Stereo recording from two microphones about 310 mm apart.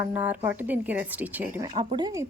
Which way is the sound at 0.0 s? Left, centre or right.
Centre.